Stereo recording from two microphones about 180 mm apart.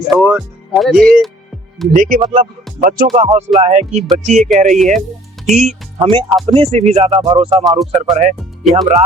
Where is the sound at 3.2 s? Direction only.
30° right (ahead or behind).